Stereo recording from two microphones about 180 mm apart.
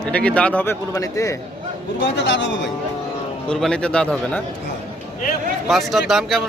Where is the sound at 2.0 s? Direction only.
90° left.